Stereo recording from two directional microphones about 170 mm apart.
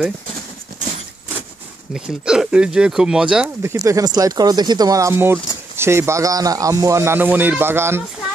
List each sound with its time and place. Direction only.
2.0 s speech: 5° right (ahead or behind)
3.6 s a man's voice: 20° right (ahead or behind)